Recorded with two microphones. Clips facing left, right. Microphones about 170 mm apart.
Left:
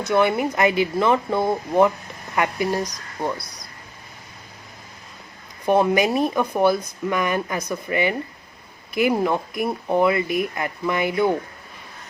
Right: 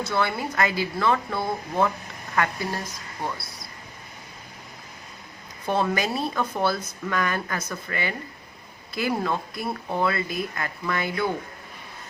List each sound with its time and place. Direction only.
0.0 s speech: 20° left (ahead or behind)
5.6 s speech: 15° left (ahead or behind)